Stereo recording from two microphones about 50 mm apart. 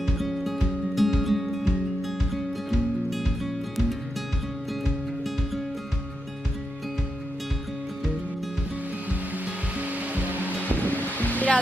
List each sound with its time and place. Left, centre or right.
0.0 s music: centre
9.7 s music: right
10.4 s music: left